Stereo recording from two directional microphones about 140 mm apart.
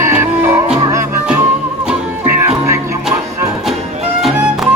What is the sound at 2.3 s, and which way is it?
Music, 20° right (ahead or behind).